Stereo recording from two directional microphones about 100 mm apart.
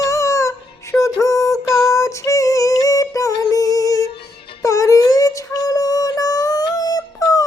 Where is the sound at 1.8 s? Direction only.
35° left (ahead or behind).